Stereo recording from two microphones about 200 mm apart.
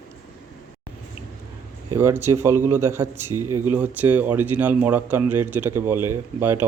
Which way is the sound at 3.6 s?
10° right (ahead or behind).